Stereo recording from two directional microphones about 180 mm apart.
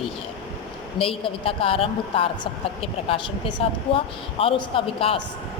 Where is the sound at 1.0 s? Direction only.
30° left (ahead or behind).